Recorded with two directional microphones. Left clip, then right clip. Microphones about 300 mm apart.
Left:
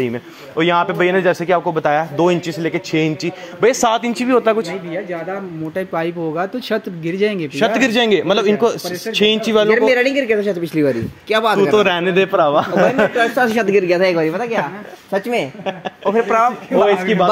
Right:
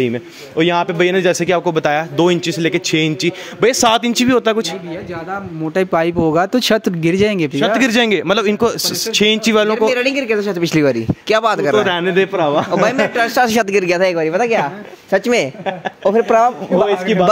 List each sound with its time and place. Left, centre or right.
0.0 s speech: right
5.8 s speech: right
10.1 s a man's voice: centre
10.6 s speech: right
11.7 s speech: centre
13.1 s speech: right
16.8 s a man's voice: centre